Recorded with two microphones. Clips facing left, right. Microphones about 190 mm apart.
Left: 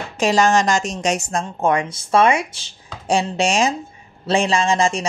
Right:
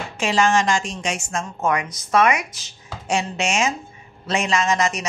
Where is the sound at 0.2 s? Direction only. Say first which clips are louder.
Left 3 dB; 40° left (ahead or behind).